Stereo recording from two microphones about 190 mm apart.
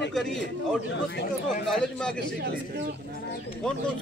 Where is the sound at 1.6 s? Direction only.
5° left (ahead or behind).